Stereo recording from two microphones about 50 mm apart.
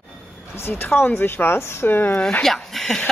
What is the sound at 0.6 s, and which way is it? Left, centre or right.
Speech, left.